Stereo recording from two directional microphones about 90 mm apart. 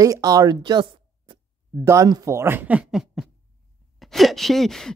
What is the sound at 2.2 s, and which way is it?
Speech, 30° right (ahead or behind).